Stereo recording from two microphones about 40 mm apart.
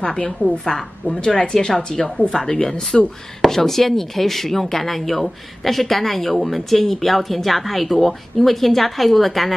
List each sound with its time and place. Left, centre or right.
0.4 s a woman's voice: left
1.2 s speech: centre
3.4 s speech: centre